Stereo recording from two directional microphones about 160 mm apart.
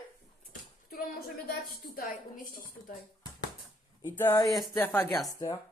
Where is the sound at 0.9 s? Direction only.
60° left (ahead or behind).